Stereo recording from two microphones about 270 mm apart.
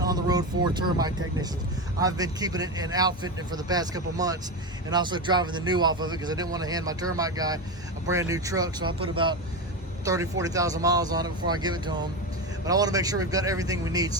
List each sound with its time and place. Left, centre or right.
0.0 s speech: centre